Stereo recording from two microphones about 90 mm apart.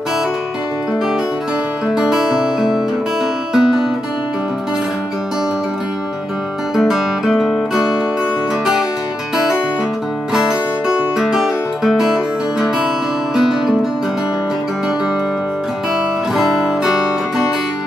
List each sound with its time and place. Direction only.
1.9 s music: 5° right (ahead or behind)
3.5 s guitar: 5° right (ahead or behind)
6.8 s music: centre (ahead or behind)
11.1 s music: 5° right (ahead or behind)
16.3 s music: 5° right (ahead or behind)